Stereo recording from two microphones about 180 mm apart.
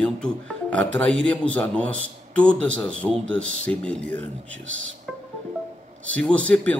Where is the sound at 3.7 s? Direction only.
5° left (ahead or behind).